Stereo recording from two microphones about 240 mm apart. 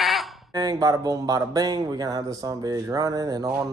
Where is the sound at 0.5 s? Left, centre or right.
Centre.